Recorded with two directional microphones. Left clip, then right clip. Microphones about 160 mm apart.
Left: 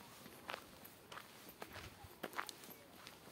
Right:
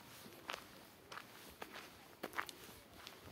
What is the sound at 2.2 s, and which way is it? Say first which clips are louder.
Walk: even; 25° right (ahead or behind).